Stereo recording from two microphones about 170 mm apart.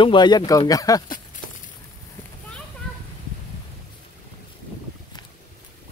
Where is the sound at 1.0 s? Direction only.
55° left (ahead or behind).